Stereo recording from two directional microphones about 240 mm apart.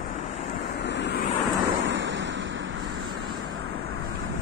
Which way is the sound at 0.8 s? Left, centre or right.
Left.